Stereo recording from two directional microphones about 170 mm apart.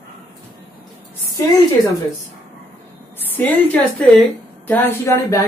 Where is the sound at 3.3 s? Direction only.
10° left (ahead or behind).